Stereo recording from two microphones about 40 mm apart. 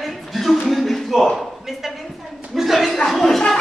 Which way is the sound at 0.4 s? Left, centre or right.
Centre.